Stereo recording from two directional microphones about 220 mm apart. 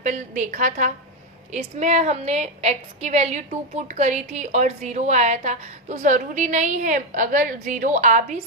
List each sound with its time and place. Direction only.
0.0 s a woman's voice: 35° right (ahead or behind)